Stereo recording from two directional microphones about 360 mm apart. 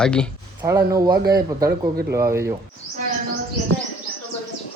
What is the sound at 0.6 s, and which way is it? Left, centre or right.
Speech, centre.